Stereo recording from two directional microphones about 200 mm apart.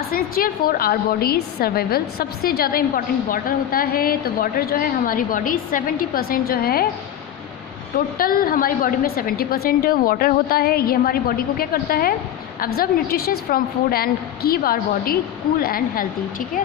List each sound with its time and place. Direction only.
0.1 s a woman's voice: 45° left (ahead or behind)
7.9 s a woman's voice: 45° left (ahead or behind)